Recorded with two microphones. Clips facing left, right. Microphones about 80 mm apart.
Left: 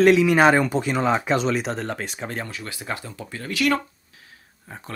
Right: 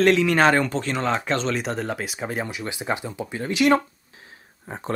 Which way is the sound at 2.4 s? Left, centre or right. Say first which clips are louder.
Right 4 dB; centre.